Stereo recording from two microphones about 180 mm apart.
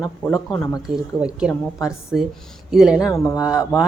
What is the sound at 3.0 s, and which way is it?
Speech, 20° left (ahead or behind).